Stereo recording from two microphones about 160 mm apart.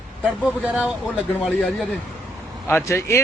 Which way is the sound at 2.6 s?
15° left (ahead or behind).